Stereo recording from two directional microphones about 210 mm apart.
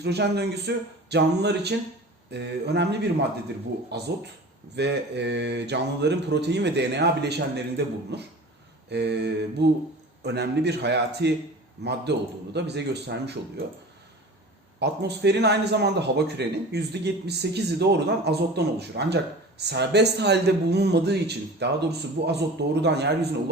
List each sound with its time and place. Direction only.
0.0 s a man's voice: 50° right (ahead or behind)
14.8 s a man's voice: 55° right (ahead or behind)